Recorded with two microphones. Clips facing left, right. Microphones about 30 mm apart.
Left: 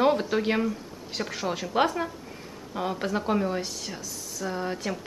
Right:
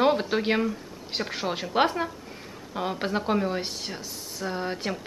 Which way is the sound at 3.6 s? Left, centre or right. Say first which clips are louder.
Right 1 dB; right.